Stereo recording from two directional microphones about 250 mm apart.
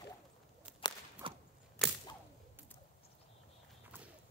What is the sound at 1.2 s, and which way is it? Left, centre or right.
Whip, right.